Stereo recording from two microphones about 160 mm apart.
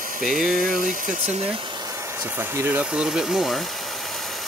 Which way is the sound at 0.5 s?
60° right (ahead or behind).